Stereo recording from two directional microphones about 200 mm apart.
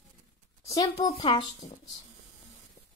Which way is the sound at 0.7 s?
20° left (ahead or behind).